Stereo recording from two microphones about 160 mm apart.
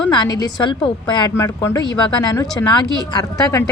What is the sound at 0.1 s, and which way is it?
A woman's voice, 25° left (ahead or behind).